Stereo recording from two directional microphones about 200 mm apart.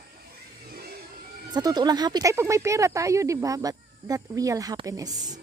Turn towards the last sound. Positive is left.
turn(degrees=-20)  # may be behind; listen again after turning